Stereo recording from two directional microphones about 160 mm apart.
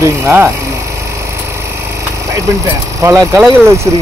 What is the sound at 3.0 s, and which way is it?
Speech, 20° right (ahead or behind).